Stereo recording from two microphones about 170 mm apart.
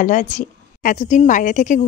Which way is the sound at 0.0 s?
50° left (ahead or behind).